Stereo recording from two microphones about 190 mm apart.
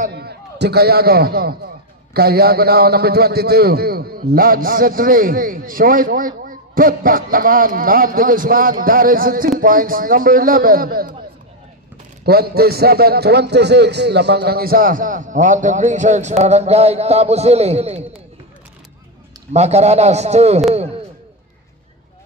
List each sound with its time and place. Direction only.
0.1 s a man's voice: 60° right (ahead or behind)
12.3 s a man's voice: 55° right (ahead or behind); by 18.2 s 35° right (ahead or behind)
19.5 s a man's voice: 35° right (ahead or behind)